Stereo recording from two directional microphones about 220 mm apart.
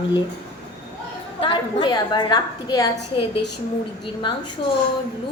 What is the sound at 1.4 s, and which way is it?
A woman's voice, 20° left (ahead or behind).